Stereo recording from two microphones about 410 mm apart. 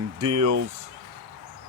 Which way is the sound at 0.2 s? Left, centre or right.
Right.